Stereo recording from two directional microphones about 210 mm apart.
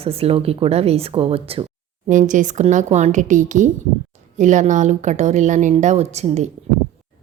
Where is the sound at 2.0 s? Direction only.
40° right (ahead or behind).